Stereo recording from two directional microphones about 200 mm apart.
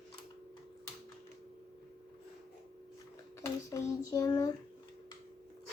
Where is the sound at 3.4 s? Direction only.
15° left (ahead or behind).